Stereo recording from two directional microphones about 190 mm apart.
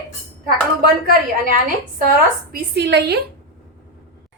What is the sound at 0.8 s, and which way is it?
A woman's voice, 50° right (ahead or behind).